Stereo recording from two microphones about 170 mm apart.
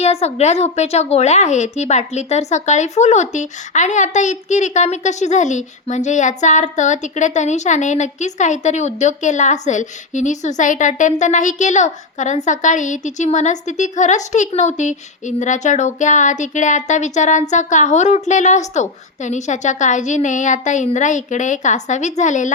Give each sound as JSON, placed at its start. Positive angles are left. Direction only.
{"t": 0.0, "sound": "speech", "side_deg": 40}